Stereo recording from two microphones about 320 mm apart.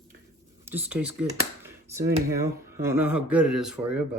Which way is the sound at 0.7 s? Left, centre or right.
Centre.